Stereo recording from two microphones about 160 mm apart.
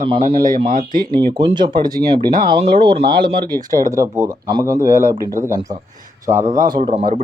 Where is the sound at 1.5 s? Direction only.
30° right (ahead or behind).